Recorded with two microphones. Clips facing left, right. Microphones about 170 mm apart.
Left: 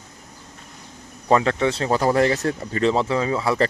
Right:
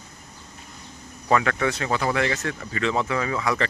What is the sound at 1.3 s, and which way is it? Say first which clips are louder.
Speech: left 3 dB; 30° left (ahead or behind).